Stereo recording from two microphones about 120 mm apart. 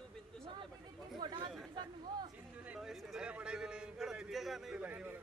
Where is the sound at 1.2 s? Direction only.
35° right (ahead or behind).